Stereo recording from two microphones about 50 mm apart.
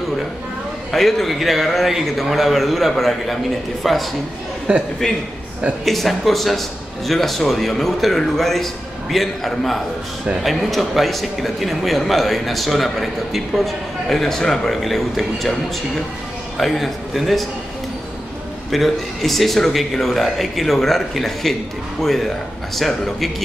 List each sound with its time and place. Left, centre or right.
0.9 s a man's voice: centre
4.7 s a man's voice: right
5.9 s a man's voice: centre
16.5 s a man's voice: centre
18.7 s a man's voice: centre